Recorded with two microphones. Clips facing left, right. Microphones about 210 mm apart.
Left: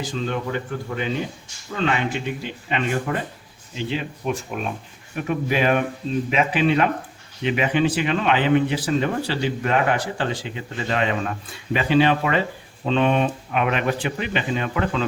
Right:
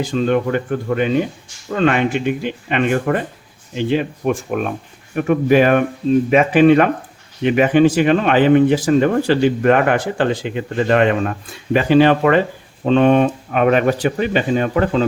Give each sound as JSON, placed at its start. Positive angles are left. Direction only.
{"t": 0.0, "sound": "speech", "side_deg": -60}
{"t": 11.7, "sound": "speech", "side_deg": -45}